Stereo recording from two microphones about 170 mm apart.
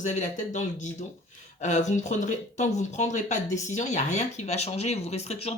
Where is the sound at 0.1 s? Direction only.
45° left (ahead or behind).